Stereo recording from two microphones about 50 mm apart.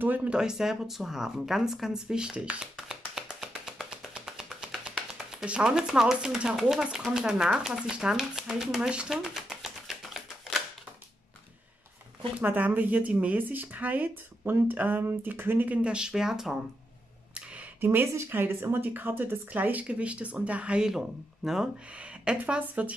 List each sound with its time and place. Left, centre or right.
0.0 s speech: right
0.3 s speech: centre
12.4 s speech: right
15.8 s speech: centre
17.7 s speech: right; by 21.0 s centre
21.4 s speech: centre
22.3 s a woman's voice: centre
22.6 s speech: right